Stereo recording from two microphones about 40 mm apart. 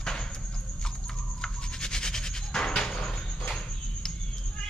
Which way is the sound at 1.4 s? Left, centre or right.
Centre.